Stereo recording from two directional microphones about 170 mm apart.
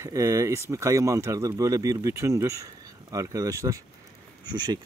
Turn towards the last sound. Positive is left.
turn(degrees=-25)  # may be behind; listen again after turning